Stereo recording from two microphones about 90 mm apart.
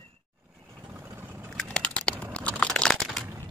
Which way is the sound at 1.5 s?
10° left (ahead or behind).